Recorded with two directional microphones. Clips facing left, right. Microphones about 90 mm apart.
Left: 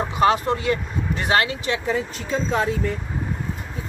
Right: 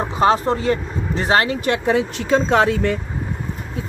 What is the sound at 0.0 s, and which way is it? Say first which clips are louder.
Speech: right 2 dB; 30° right (ahead or behind).